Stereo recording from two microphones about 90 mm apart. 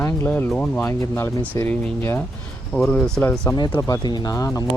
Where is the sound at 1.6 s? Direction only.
15° left (ahead or behind).